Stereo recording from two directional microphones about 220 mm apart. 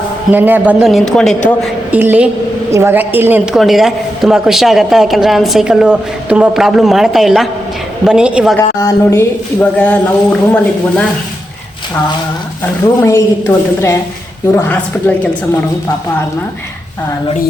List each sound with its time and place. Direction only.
0.3 s a woman's voice: 10° right (ahead or behind)
8.5 s speech: 10° left (ahead or behind)
13.0 s speech: 15° left (ahead or behind)
14.5 s speech: 5° left (ahead or behind)